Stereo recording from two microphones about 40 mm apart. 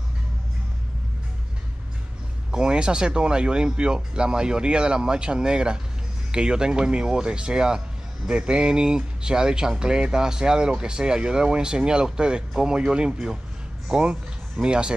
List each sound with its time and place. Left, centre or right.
2.5 s speech: right